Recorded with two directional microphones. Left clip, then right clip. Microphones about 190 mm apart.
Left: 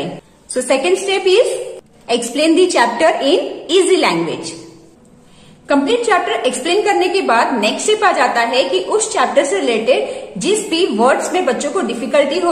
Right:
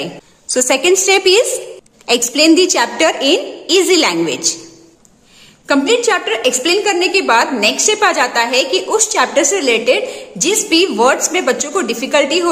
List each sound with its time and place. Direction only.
0.0 s a woman's voice: 40° right (ahead or behind)
5.7 s a woman's voice: 35° right (ahead or behind)